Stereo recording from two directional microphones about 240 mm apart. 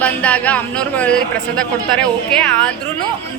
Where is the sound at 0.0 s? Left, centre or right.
Centre.